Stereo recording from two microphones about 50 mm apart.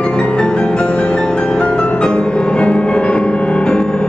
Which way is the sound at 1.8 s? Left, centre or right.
Left.